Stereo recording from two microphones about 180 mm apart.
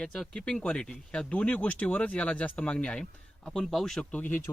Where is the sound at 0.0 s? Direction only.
5° left (ahead or behind).